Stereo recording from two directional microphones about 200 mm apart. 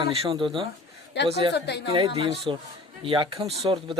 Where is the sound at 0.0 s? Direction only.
30° right (ahead or behind).